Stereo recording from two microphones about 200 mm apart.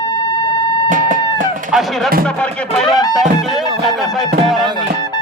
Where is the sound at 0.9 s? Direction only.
40° right (ahead or behind).